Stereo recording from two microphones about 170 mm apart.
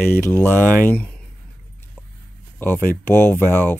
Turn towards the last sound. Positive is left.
turn(degrees=10)  # may be behind; listen again after turning